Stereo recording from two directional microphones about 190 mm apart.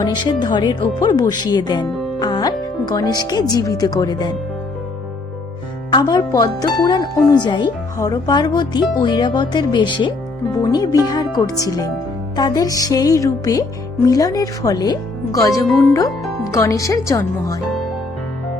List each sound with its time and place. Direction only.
0.0 s speech: 20° left (ahead or behind)
5.9 s speech: 20° left (ahead or behind)